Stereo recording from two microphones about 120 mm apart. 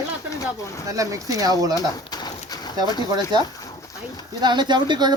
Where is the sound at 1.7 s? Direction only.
35° left (ahead or behind).